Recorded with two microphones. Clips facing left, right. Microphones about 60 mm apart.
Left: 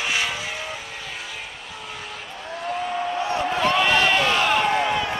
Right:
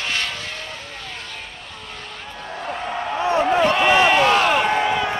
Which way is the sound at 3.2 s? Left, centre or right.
Right.